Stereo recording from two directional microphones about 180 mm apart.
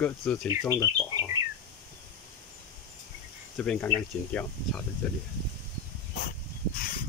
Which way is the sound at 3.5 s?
5° left (ahead or behind).